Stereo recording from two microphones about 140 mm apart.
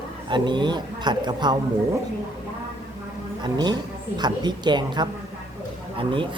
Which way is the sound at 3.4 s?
30° right (ahead or behind).